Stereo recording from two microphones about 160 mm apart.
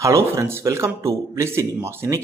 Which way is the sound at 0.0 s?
20° right (ahead or behind).